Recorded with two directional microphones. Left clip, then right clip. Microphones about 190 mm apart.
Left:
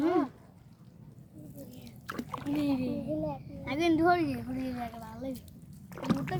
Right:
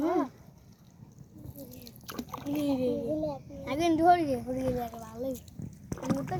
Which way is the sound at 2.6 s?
10° right (ahead or behind).